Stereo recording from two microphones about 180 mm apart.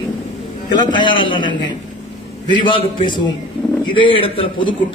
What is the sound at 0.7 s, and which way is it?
A man's voice, 25° left (ahead or behind).